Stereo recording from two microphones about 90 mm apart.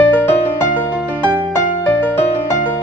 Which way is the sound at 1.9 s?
20° left (ahead or behind).